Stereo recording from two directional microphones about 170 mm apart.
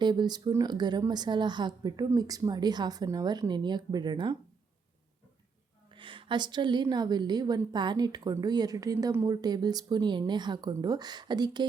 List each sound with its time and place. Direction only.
0.0 s a woman's voice: 25° right (ahead or behind)
5.9 s a woman's voice: 30° right (ahead or behind)